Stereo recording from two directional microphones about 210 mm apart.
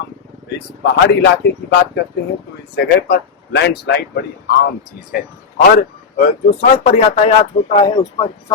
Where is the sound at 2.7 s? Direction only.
50° left (ahead or behind).